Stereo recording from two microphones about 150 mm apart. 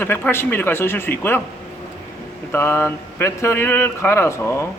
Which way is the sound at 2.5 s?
15° left (ahead or behind).